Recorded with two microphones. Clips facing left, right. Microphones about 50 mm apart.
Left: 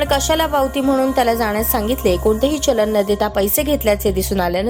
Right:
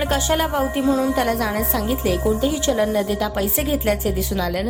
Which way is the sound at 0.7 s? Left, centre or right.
Left.